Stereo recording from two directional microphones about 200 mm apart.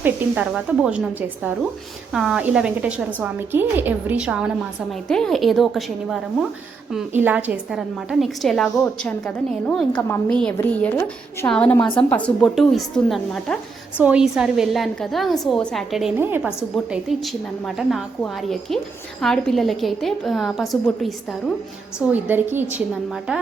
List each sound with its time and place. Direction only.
0.0 s a woman's voice: 10° right (ahead or behind)
22.1 s a woman's voice: 10° right (ahead or behind)